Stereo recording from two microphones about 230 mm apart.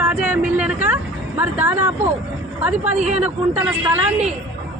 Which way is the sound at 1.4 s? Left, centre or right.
Centre.